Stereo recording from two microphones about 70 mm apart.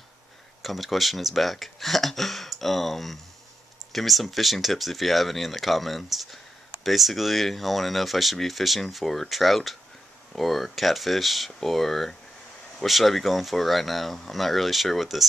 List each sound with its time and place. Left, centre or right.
0.6 s speech: centre